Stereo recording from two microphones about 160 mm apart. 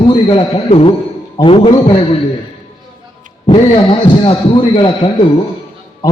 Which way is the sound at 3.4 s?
35° left (ahead or behind).